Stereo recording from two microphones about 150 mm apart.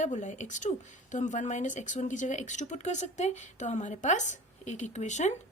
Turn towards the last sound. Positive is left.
turn(degrees=50)  # may be behind; listen again after turning